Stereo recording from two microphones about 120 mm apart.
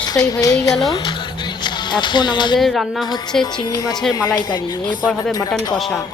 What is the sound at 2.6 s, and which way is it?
Music, centre (ahead or behind).